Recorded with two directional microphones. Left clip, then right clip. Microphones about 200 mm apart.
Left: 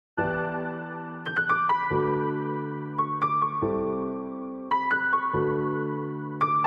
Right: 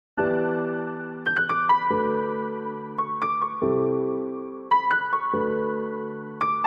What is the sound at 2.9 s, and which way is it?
Music, centre (ahead or behind).